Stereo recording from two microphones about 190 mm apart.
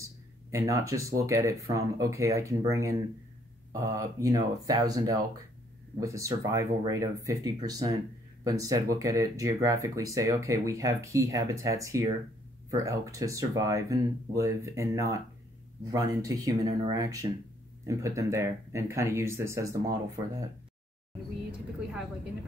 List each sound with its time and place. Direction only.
0.5 s speech: 15° right (ahead or behind)